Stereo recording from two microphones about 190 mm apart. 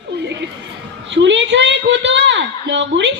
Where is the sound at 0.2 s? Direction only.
65° right (ahead or behind).